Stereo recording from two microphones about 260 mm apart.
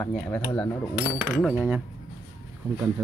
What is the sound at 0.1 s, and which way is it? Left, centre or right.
Speech, centre.